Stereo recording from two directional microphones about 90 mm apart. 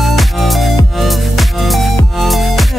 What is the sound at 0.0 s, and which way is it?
Music, centre (ahead or behind).